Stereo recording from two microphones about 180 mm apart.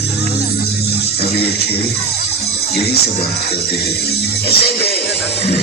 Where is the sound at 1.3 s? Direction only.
60° left (ahead or behind).